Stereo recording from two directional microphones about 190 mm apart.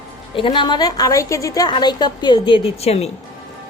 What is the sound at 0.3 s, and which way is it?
A woman's voice, 25° left (ahead or behind).